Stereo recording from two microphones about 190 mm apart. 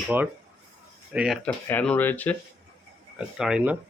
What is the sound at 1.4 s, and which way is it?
Speech, 5° left (ahead or behind).